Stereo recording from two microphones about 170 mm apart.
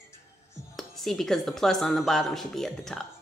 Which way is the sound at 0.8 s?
Centre (ahead or behind).